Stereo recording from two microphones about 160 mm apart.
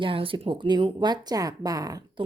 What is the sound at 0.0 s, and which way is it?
Speech, 35° right (ahead or behind).